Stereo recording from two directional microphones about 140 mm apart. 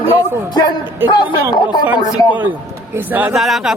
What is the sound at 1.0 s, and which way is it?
Speech, 30° left (ahead or behind).